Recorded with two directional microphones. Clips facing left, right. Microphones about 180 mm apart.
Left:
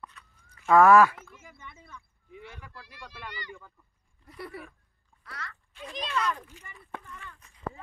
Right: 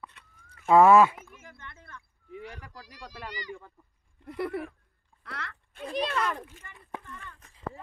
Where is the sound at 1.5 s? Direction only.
5° left (ahead or behind).